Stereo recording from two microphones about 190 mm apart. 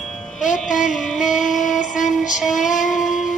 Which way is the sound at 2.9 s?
Centre (ahead or behind).